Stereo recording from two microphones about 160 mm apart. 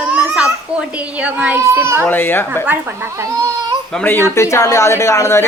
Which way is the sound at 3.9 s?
10° left (ahead or behind).